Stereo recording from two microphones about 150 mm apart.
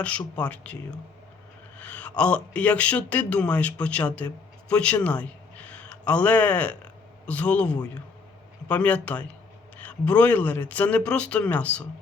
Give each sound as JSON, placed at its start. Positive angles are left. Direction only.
{"t": 0.0, "sound": "speech", "side_deg": 10}
{"t": 1.8, "sound": "a man's voice", "side_deg": 10}